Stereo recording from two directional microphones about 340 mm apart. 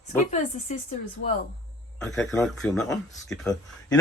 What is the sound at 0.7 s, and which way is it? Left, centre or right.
Speech, left.